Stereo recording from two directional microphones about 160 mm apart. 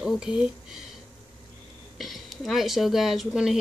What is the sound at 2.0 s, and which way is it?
Speech, centre (ahead or behind).